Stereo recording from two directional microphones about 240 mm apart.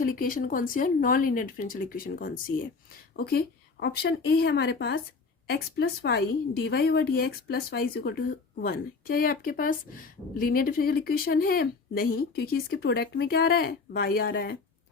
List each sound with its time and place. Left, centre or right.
0.0 s a woman's voice: left